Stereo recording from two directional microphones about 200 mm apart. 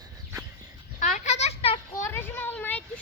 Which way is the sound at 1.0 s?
35° left (ahead or behind).